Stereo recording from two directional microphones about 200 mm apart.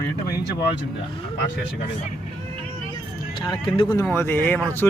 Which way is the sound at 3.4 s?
25° left (ahead or behind).